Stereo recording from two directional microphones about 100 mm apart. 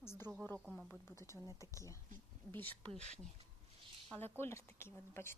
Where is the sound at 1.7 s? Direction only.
30° left (ahead or behind).